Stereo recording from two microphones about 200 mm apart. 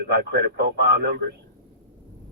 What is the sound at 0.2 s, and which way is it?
Speech, 55° right (ahead or behind).